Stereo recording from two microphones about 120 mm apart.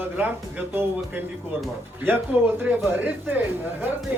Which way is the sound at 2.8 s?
15° right (ahead or behind).